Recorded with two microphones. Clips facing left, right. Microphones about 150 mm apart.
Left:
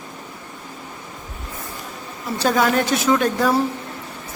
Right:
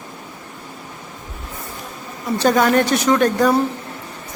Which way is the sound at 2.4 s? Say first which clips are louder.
Right 3 dB; centre (ahead or behind).